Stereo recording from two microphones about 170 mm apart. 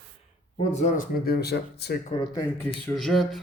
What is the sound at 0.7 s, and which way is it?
Speech, 45° left (ahead or behind).